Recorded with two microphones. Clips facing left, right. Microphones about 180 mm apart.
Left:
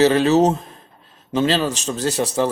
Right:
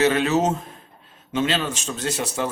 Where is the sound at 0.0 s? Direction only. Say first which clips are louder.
Left 5 dB; 35° left (ahead or behind).